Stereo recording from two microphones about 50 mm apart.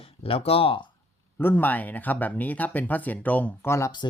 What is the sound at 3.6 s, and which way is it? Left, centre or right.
Speech, left.